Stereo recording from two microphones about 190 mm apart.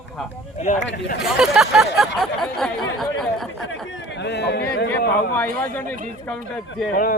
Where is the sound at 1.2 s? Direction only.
5° right (ahead or behind).